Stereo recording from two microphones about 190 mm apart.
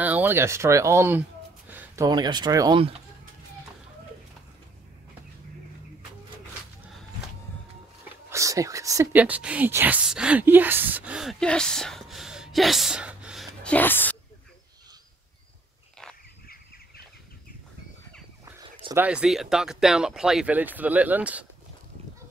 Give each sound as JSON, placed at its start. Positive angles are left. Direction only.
{"t": 0.0, "sound": "speech", "side_deg": -10}
{"t": 1.7, "sound": "a sound", "side_deg": -10}
{"t": 2.0, "sound": "speech", "side_deg": -20}
{"t": 8.3, "sound": "speech", "side_deg": -15}
{"t": 18.9, "sound": "speech", "side_deg": -5}